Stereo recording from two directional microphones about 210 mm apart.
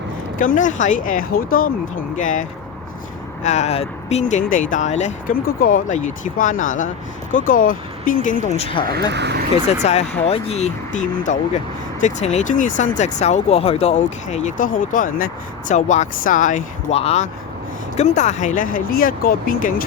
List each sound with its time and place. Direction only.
0.3 s speech: 40° left (ahead or behind)
8.9 s speech: 50° right (ahead or behind)
9.8 s speech: 30° left (ahead or behind)